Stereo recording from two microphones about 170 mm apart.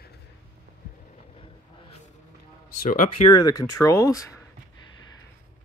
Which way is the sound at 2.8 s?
55° left (ahead or behind).